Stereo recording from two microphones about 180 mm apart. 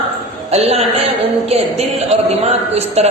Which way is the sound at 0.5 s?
35° right (ahead or behind).